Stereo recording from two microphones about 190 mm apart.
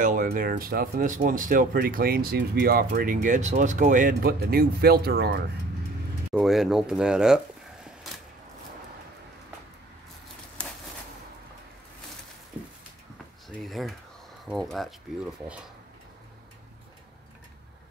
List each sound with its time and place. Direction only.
0.0 s speech: 45° right (ahead or behind)
6.3 s speech: centre (ahead or behind)
13.6 s a sound: centre (ahead or behind)
14.5 s speech: centre (ahead or behind)